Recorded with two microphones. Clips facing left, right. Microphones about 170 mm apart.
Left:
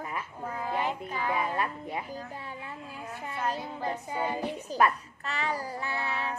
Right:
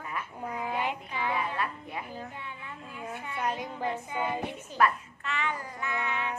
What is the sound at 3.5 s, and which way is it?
Child singing, 35° left (ahead or behind).